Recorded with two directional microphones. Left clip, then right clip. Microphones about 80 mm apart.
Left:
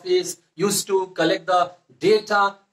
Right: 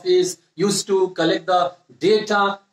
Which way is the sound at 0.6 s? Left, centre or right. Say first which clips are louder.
Right 3 dB; right.